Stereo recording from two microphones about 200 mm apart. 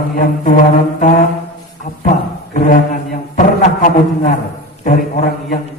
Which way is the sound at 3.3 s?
40° left (ahead or behind).